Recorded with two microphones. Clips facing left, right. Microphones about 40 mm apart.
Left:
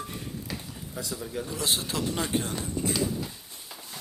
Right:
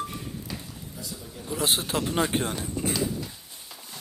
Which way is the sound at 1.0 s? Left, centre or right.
Left.